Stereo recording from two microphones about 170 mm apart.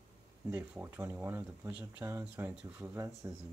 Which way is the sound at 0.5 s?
15° right (ahead or behind).